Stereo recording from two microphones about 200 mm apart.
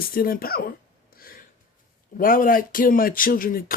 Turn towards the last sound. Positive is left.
turn(degrees=45)  # may be behind; listen again after turning